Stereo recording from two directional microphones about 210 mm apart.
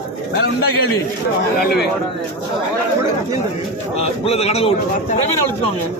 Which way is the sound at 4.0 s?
30° left (ahead or behind).